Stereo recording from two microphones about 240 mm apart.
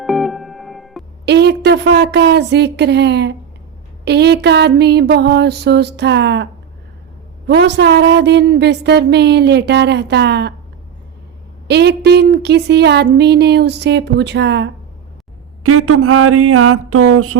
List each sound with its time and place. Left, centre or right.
0.0 s music: centre
1.2 s a woman's voice: right
11.7 s a woman's voice: right
15.6 s a sound: right